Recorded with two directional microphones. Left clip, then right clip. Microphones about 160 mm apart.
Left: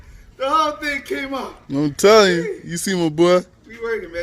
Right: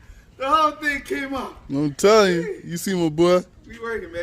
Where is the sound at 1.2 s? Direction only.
30° right (ahead or behind).